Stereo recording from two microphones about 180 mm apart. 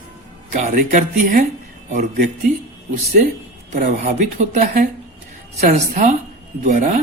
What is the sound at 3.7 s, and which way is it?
Speech, 50° right (ahead or behind).